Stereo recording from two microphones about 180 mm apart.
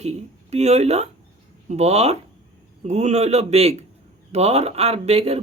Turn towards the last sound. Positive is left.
turn(degrees=-35)  # may be behind; listen again after turning